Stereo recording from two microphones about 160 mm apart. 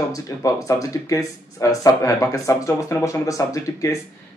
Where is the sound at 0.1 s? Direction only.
20° left (ahead or behind).